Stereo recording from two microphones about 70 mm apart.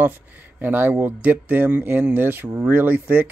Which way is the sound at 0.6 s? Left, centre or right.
Right.